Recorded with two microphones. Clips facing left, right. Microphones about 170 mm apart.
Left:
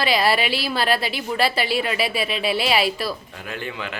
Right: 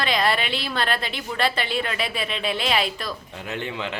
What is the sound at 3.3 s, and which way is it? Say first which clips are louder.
Speech: right 1 dB; 25° right (ahead or behind).